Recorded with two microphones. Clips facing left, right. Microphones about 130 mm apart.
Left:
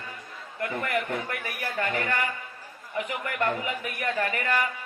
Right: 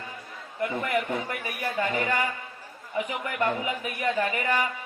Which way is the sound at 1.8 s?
15° right (ahead or behind).